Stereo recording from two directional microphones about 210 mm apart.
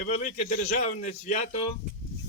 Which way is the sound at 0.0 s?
40° left (ahead or behind).